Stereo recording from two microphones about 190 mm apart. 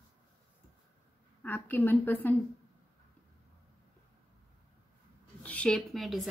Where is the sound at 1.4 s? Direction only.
10° left (ahead or behind).